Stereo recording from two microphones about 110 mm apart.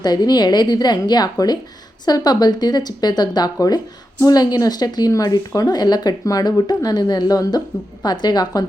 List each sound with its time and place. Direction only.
0.0 s a woman's voice: 40° left (ahead or behind)